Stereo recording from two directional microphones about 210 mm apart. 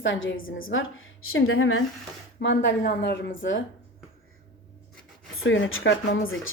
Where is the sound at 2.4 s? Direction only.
60° left (ahead or behind).